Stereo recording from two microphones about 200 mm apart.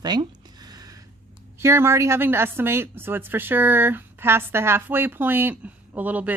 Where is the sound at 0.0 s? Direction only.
20° right (ahead or behind).